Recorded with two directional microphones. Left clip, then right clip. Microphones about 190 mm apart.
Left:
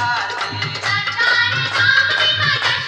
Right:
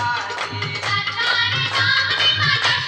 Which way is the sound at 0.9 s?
40° left (ahead or behind).